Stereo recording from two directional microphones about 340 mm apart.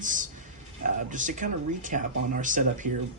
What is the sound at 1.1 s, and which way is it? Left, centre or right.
Speech, right.